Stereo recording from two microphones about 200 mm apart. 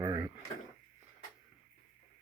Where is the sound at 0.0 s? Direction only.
20° right (ahead or behind).